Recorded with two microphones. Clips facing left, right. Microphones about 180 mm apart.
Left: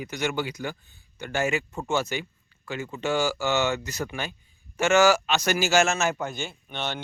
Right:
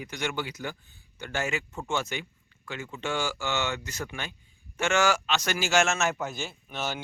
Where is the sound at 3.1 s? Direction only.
40° left (ahead or behind).